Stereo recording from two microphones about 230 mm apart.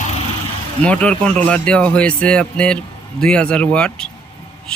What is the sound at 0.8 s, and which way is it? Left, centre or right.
Speech, centre.